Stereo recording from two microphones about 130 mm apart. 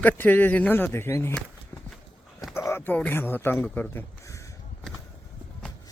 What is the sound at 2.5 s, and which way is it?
Speech, 20° left (ahead or behind).